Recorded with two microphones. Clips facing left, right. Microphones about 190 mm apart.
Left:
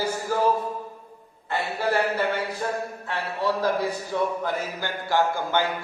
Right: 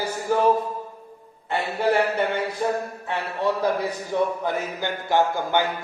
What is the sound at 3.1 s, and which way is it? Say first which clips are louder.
Speech: right 2 dB; 20° right (ahead or behind).